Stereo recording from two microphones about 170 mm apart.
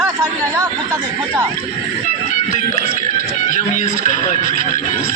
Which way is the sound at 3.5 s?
50° left (ahead or behind).